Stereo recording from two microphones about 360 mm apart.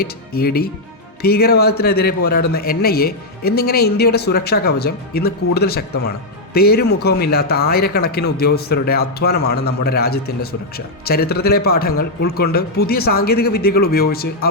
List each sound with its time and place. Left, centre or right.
0.0 s a man's voice: left